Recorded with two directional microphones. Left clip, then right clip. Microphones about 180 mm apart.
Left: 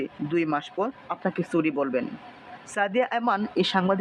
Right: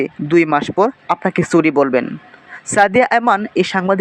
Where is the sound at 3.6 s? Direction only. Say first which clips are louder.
Right 8 dB; 20° right (ahead or behind).